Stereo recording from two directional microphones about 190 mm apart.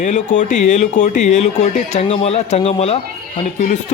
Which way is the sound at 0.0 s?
40° left (ahead or behind).